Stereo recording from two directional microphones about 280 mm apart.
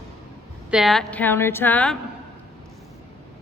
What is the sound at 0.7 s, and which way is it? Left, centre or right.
A woman's voice, centre.